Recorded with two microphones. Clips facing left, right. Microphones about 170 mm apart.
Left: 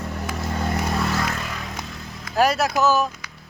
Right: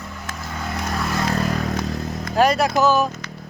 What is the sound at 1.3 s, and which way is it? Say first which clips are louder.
Vehicle: right 8 dB; 40° right (ahead or behind).